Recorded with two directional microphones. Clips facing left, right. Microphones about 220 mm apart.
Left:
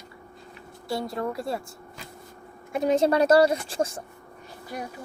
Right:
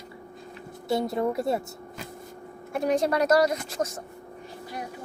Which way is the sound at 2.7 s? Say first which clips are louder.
Left 3 dB; 25° left (ahead or behind).